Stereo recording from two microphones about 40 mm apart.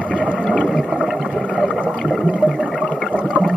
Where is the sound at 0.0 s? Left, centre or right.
Right.